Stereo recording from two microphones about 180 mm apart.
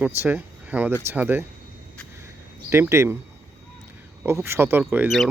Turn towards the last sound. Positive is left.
turn(degrees=-5)  # may be behind; listen again after turning